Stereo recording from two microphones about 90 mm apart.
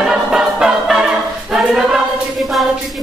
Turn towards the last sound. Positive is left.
turn(degrees=0)  # may be behind; listen again after turning